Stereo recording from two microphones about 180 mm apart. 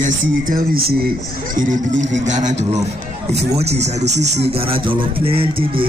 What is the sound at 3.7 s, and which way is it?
Music, 40° right (ahead or behind).